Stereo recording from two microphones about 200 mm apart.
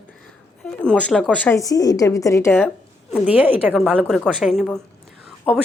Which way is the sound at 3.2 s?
10° right (ahead or behind).